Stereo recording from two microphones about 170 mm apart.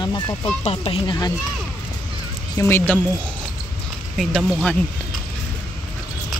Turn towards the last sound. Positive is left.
turn(degrees=5)  # may be behind; listen again after turning